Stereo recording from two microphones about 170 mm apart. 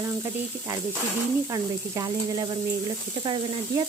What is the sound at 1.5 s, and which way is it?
Speech, 20° right (ahead or behind).